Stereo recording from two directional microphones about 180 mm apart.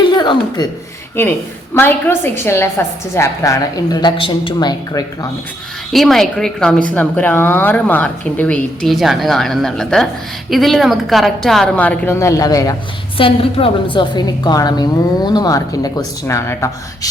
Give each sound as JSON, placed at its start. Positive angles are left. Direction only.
{"t": 0.1, "sound": "chuckle", "side_deg": 25}
{"t": 1.7, "sound": "a woman's voice", "side_deg": 10}
{"t": 5.9, "sound": "a woman's voice", "side_deg": 0}